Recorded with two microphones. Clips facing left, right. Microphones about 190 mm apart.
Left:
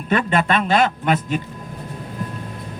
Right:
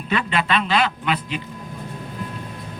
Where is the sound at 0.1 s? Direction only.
45° left (ahead or behind).